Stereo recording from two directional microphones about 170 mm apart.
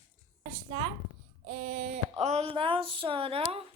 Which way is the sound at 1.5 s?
50° right (ahead or behind).